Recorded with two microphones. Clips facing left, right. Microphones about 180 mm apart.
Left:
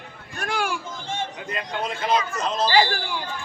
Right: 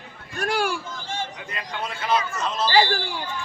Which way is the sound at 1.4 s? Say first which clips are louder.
Left 3 dB; 40° left (ahead or behind).